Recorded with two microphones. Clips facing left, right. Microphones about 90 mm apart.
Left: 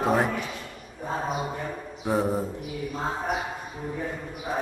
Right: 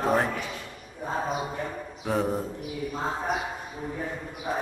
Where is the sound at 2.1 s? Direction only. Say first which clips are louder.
Left 2 dB; 5° left (ahead or behind).